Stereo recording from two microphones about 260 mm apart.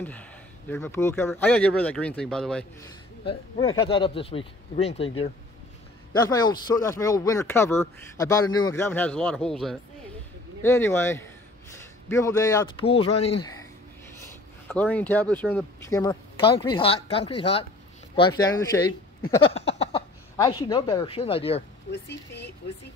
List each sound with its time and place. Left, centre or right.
0.0 s a man's voice: centre
3.3 s speech: centre
6.1 s speech: centre
14.7 s speech: centre; by 21.6 s left
21.9 s speech: left